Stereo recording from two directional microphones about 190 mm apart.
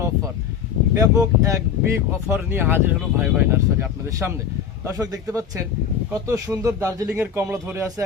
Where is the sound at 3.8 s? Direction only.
15° right (ahead or behind).